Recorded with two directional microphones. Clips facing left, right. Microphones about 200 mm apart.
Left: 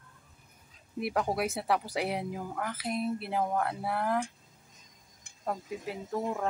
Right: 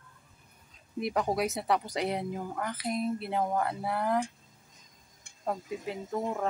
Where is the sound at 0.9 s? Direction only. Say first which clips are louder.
Right 1 dB; 5° left (ahead or behind).